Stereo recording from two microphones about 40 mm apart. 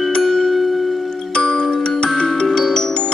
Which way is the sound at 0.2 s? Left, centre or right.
Centre.